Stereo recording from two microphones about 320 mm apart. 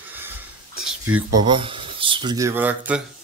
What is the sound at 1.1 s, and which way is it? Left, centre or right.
Speech, right.